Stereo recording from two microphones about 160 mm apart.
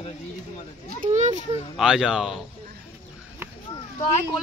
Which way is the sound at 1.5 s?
5° right (ahead or behind).